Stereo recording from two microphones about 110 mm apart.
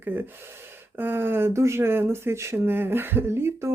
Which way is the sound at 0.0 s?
15° right (ahead or behind).